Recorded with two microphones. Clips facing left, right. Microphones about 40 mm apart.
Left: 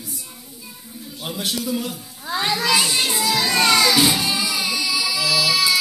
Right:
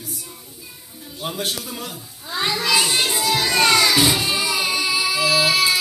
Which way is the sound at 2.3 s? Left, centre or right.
Centre.